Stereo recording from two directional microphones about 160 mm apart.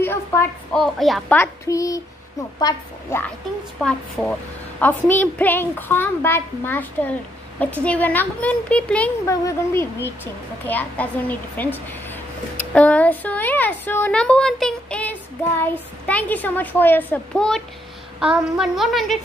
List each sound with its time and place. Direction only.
0.0 s a woman's voice: 15° left (ahead or behind)
0.7 s a woman's voice: centre (ahead or behind)
1.4 s a woman's voice: 20° left (ahead or behind)
3.8 s a woman's voice: 5° left (ahead or behind)
9.2 s a woman's voice: 20° left (ahead or behind); by 19.1 s centre (ahead or behind)